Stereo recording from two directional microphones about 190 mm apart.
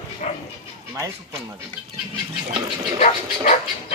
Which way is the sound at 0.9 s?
15° right (ahead or behind).